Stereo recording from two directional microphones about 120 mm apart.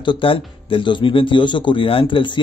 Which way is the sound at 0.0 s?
45° left (ahead or behind).